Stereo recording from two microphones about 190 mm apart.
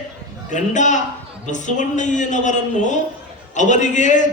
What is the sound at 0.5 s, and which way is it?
A man's voice, 40° left (ahead or behind).